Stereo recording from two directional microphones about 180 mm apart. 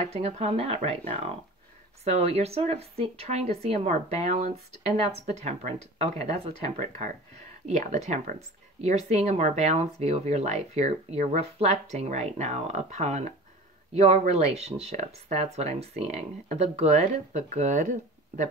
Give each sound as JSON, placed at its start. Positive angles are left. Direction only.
{"t": 0.0, "sound": "speech", "side_deg": -35}